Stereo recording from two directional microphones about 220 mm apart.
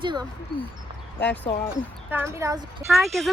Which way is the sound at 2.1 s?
10° right (ahead or behind).